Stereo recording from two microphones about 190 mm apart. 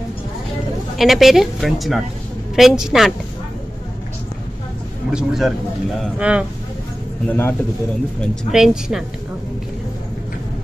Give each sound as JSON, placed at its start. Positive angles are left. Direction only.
{"t": 0.9, "sound": "a woman's voice", "side_deg": 0}
{"t": 5.1, "sound": "a woman's voice", "side_deg": 0}
{"t": 7.2, "sound": "speech", "side_deg": 10}
{"t": 8.5, "sound": "a woman's voice", "side_deg": 0}